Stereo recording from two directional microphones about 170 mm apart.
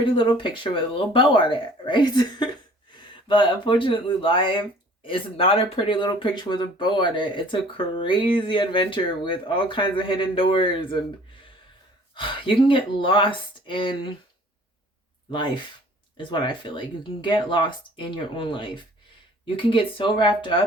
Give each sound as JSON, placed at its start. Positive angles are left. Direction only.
{"t": 0.0, "sound": "speech", "side_deg": 25}
{"t": 12.1, "sound": "speech", "side_deg": 30}
{"t": 16.1, "sound": "speech", "side_deg": 30}